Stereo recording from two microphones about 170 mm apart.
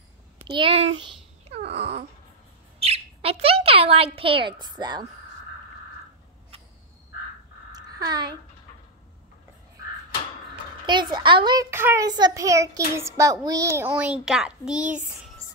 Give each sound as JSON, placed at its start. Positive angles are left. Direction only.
{"t": 0.5, "sound": "a child's voice", "side_deg": -30}
{"t": 1.5, "sound": "a sound", "side_deg": -35}
{"t": 2.8, "sound": "bird", "side_deg": -35}
{"t": 7.7, "sound": "a sound", "side_deg": -25}
{"t": 10.9, "sound": "speech", "side_deg": -25}
{"t": 11.7, "sound": "a child's voice", "side_deg": -15}